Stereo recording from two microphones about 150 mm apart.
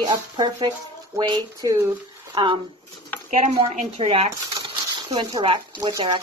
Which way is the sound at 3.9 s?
40° right (ahead or behind).